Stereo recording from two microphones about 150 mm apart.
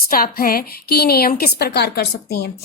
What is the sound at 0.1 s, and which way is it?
A woman's voice, 75° left (ahead or behind).